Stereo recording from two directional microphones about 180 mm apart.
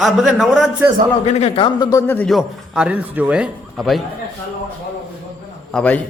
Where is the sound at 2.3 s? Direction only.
5° right (ahead or behind).